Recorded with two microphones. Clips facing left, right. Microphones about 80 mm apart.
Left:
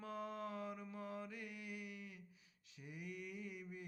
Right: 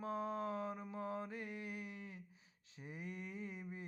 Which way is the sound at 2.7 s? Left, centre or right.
Right.